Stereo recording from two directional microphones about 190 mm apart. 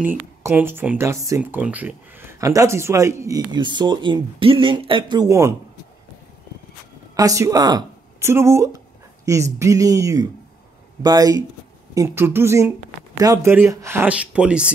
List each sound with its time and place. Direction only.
0.4 s speech: 15° right (ahead or behind)
7.2 s speech: 15° right (ahead or behind)